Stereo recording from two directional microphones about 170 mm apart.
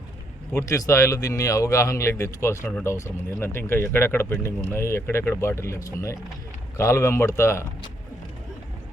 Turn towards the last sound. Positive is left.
turn(degrees=15)  # may be behind; listen again after turning